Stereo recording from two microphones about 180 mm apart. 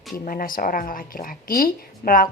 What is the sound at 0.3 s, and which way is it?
A woman's voice, 50° left (ahead or behind).